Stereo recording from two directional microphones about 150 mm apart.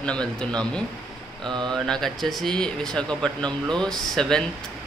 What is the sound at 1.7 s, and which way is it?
Speech, 5° left (ahead or behind).